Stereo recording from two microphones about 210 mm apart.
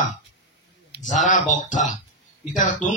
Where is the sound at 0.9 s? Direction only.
35° left (ahead or behind).